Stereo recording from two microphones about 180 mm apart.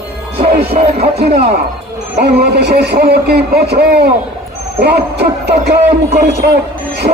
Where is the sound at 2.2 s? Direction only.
65° right (ahead or behind).